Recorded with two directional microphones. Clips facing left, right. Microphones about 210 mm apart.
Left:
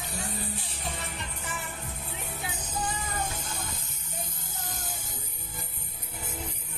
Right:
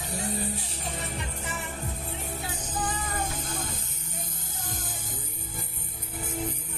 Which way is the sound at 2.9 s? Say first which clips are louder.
Right 2 dB; 50° right (ahead or behind).